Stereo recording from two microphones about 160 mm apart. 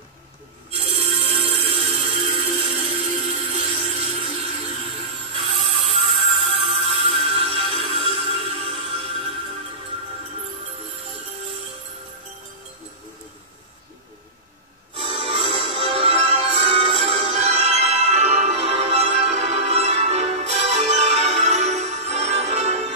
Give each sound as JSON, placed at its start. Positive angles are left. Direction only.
{"t": 0.7, "sound": "music", "side_deg": -35}
{"t": 3.0, "sound": "music", "side_deg": 0}
{"t": 3.9, "sound": "a sound", "side_deg": -40}
{"t": 4.6, "sound": "music", "side_deg": -35}
{"t": 15.0, "sound": "music", "side_deg": -40}